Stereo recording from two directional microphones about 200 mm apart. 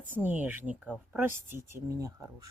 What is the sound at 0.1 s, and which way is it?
Speech, 10° right (ahead or behind).